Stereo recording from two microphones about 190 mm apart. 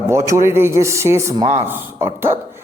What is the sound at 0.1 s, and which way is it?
A man's voice, 15° right (ahead or behind).